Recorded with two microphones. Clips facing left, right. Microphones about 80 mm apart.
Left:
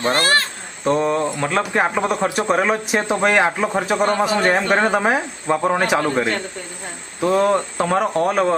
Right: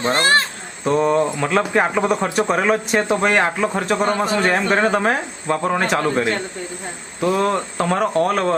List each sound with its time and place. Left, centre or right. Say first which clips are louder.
0.0 s speech: right 1 dB; right
0.9 s speech: right 1 dB; centre
7.2 s speech: left 2 dB; centre